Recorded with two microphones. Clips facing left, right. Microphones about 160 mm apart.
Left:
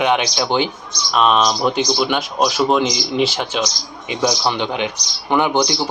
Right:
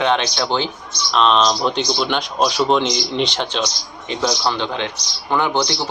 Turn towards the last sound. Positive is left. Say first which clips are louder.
# left 2 dB
turn(degrees=15)  # may be behind; listen again after turning